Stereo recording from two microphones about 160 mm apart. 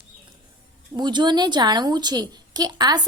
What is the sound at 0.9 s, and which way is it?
A woman's voice, 25° right (ahead or behind).